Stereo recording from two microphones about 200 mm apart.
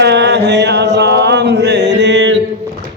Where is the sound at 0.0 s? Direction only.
60° right (ahead or behind).